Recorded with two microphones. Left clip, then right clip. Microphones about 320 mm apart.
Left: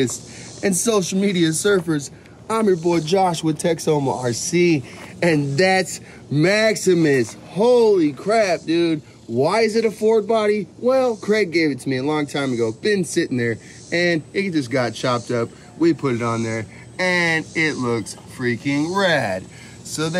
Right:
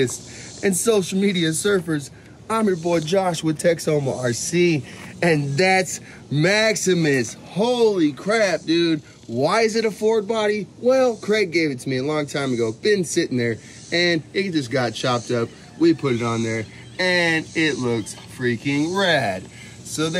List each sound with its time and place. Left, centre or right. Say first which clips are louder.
0.6 s speech: even; centre